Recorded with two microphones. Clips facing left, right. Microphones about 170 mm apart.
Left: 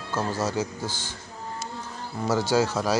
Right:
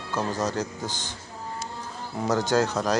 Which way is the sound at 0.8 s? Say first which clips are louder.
Even; 15° right (ahead or behind).